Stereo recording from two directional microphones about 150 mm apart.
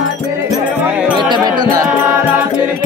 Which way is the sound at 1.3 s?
30° right (ahead or behind).